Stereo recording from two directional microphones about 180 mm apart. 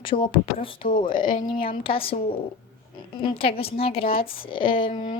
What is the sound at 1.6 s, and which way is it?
A woman's voice, 30° left (ahead or behind).